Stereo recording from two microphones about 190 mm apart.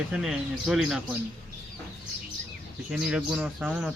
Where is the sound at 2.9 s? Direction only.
5° right (ahead or behind).